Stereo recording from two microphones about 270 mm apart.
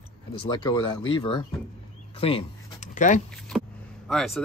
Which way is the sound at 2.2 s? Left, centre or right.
Left.